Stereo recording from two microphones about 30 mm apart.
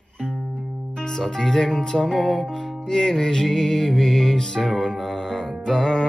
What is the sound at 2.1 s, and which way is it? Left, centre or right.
Music, centre.